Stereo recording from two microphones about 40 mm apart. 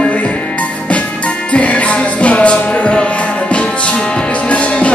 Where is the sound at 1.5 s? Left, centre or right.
Left.